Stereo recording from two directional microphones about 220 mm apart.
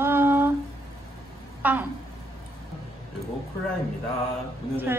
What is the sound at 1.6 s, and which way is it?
Speech, 5° right (ahead or behind).